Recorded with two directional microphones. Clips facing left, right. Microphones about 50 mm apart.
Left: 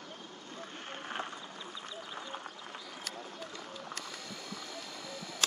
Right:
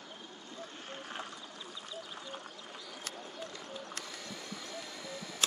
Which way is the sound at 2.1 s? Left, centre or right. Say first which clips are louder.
Left 3 dB; left.